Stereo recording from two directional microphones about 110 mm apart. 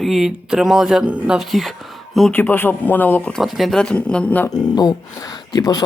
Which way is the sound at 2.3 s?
15° left (ahead or behind).